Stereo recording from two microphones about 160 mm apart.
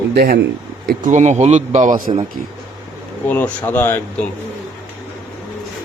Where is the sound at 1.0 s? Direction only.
50° right (ahead or behind).